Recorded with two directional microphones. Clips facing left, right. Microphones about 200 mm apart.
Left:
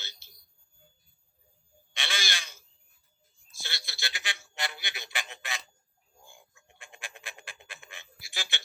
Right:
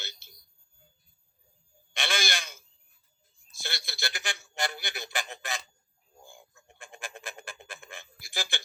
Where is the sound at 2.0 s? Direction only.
50° right (ahead or behind).